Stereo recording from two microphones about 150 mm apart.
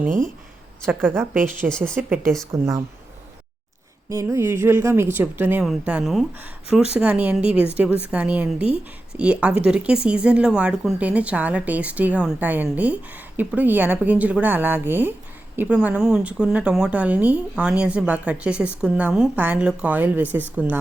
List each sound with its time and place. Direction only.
0.9 s speech: 15° right (ahead or behind)
2.5 s speech: 20° right (ahead or behind)
4.1 s a woman's voice: 20° right (ahead or behind)